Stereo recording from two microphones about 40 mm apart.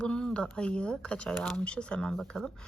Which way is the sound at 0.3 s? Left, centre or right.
Left.